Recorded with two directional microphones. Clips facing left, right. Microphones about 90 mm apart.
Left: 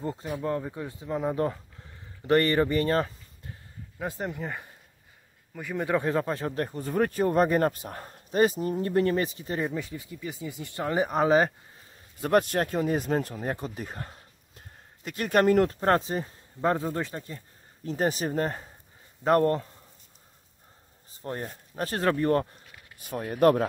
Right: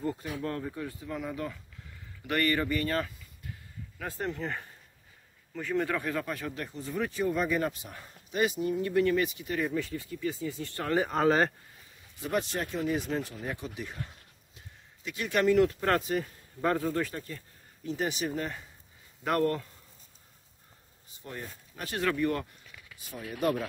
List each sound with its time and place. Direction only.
0.0 s speech: 25° left (ahead or behind)
4.0 s speech: 15° left (ahead or behind)
5.9 s speech: 30° left (ahead or behind)
9.8 s speech: 20° left (ahead or behind)
12.2 s speech: 55° left (ahead or behind); by 17.4 s 25° left (ahead or behind)
17.8 s speech: 40° left (ahead or behind)
21.1 s speech: 40° left (ahead or behind)
22.9 s speech: 60° left (ahead or behind)